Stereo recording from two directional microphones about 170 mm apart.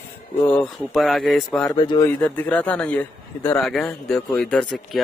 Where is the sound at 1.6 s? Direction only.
25° left (ahead or behind).